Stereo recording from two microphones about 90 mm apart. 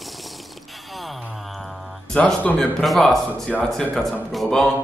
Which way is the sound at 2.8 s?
5° left (ahead or behind).